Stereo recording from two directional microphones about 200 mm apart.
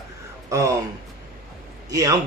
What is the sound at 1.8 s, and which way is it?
Speech, 15° right (ahead or behind).